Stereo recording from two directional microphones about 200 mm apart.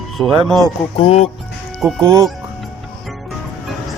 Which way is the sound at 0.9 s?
30° left (ahead or behind).